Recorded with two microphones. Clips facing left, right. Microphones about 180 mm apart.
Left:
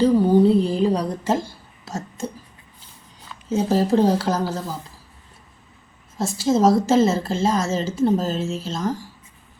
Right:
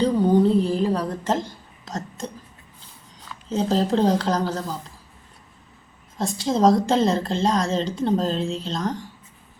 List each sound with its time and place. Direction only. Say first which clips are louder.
0.0 s a sound: left 3 dB; 5° left (ahead or behind)
3.5 s a woman's voice: left 2 dB; 10° left (ahead or behind)
6.1 s a woman's voice: left 3 dB; 5° left (ahead or behind)